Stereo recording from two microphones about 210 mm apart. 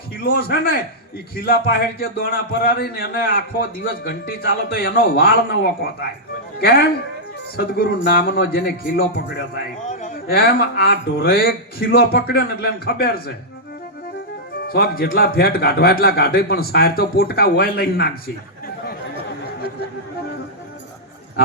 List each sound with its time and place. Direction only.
0.2 s a man's voice: 45° left (ahead or behind)
9.9 s a man's voice: 40° left (ahead or behind)
14.7 s a man's voice: 45° left (ahead or behind)